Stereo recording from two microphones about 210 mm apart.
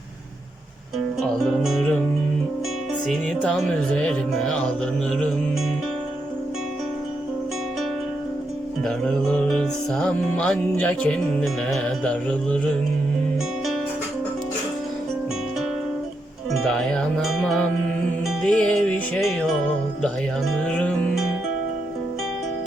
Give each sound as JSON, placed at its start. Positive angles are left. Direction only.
{"t": 1.6, "sound": "music", "side_deg": 0}
{"t": 3.1, "sound": "music", "side_deg": 0}
{"t": 8.8, "sound": "music", "side_deg": 0}
{"t": 16.6, "sound": "music", "side_deg": 5}
{"t": 20.7, "sound": "music", "side_deg": 5}